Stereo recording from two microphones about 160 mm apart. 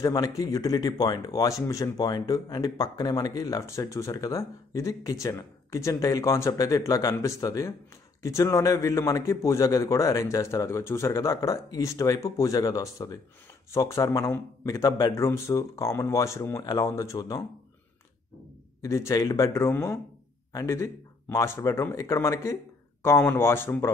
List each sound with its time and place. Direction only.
0.0 s speech: 25° left (ahead or behind)
18.8 s speech: 20° left (ahead or behind)